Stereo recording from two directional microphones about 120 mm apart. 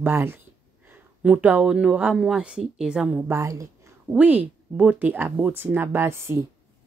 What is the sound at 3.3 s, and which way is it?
Speech, 25° right (ahead or behind).